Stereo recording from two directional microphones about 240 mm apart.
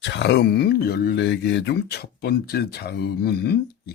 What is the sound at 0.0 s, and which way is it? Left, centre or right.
Speech, left.